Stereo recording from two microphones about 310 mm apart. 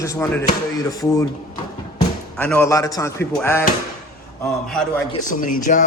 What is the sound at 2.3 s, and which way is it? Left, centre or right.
A man's voice, centre.